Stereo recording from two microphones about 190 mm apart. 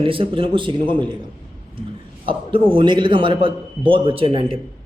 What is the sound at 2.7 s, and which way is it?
A man's voice, 25° right (ahead or behind).